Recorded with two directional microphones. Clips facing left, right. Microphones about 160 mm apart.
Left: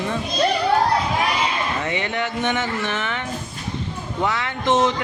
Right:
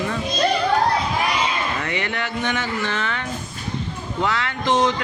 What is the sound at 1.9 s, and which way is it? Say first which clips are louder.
A man's voice: left 2 dB; 20° left (ahead or behind).